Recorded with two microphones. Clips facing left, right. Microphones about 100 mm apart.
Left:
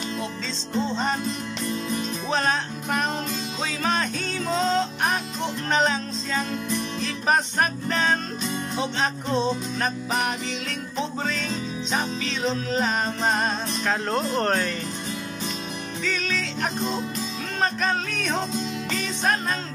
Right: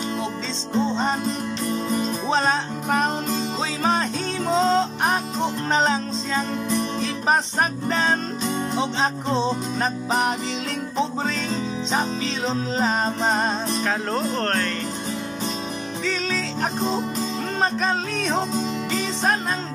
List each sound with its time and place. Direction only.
0.7 s music: 20° right (ahead or behind)
1.7 s music: 35° right (ahead or behind)
2.3 s music: 25° right (ahead or behind)
7.9 s music: 25° right (ahead or behind)
12.4 s music: 25° right (ahead or behind)
13.8 s speech: centre (ahead or behind)
16.0 s music: 25° right (ahead or behind)